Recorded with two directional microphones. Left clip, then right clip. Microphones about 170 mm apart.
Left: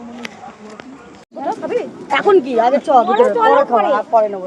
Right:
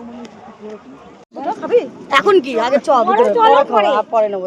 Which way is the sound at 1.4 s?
40° right (ahead or behind).